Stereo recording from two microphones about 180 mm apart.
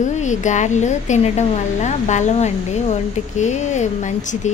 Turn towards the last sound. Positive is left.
turn(degrees=40)  # may be behind; listen again after turning